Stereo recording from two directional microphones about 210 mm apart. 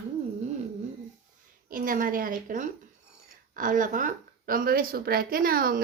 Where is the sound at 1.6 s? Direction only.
40° right (ahead or behind).